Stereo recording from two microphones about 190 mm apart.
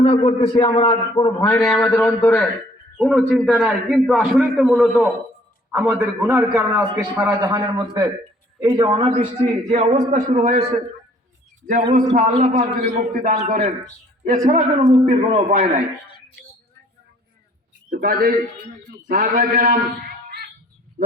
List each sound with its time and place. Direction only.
0.0 s a man's voice: 25° left (ahead or behind)
2.0 s a man's voice: 5° left (ahead or behind); by 9.1 s 25° right (ahead or behind)
9.4 s a man's voice: 40° right (ahead or behind)
11.9 s a man's voice: 45° right (ahead or behind)
17.9 s a man's voice: 50° right (ahead or behind)